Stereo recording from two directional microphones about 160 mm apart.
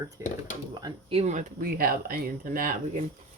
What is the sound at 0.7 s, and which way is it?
Speech, 30° right (ahead or behind).